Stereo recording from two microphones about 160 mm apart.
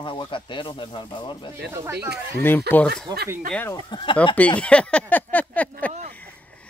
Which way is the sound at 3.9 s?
30° left (ahead or behind).